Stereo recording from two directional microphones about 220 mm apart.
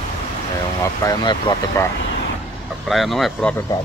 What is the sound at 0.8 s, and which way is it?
Speech, 15° left (ahead or behind).